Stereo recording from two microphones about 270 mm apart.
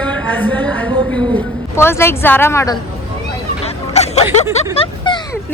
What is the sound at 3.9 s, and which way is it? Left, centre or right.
Snicker, left.